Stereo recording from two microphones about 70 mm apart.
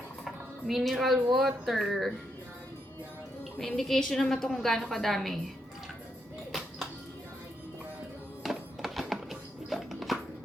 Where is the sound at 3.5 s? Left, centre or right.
Centre.